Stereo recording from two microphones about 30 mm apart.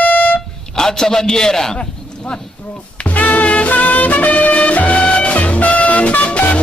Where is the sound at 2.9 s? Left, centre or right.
Left.